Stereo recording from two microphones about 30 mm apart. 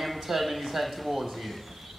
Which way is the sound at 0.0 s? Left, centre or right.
Centre.